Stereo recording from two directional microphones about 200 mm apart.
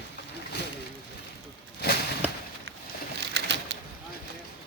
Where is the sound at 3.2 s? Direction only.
60° right (ahead or behind).